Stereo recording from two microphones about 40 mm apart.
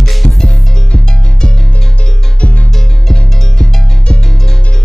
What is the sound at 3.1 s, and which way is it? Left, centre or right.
Music, centre.